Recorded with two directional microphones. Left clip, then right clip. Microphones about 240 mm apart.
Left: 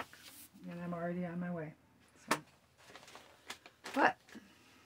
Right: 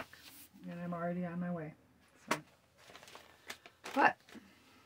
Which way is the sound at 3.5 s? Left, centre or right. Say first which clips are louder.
Even; right.